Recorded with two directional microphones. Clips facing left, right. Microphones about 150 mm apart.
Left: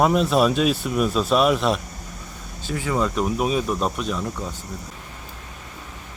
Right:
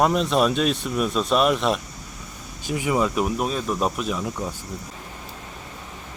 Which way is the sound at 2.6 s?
15° right (ahead or behind).